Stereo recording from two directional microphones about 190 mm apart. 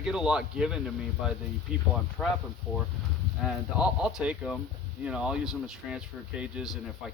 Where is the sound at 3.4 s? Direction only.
5° right (ahead or behind).